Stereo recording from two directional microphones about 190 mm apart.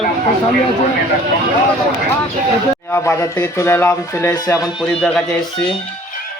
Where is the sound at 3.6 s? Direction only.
10° left (ahead or behind).